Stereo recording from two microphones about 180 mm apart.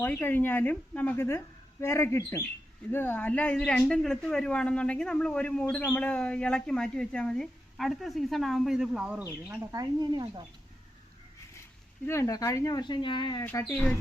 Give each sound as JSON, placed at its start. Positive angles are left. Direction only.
{"t": 0.0, "sound": "speech", "side_deg": 10}
{"t": 9.7, "sound": "speech", "side_deg": -25}
{"t": 12.0, "sound": "speech", "side_deg": 15}
{"t": 13.4, "sound": "speech", "side_deg": 10}